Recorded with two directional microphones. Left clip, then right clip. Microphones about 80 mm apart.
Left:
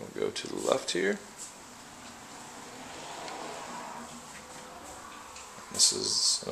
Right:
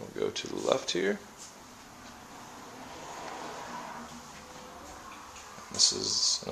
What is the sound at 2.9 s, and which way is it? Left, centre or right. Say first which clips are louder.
Vehicle: left 1 dB; left.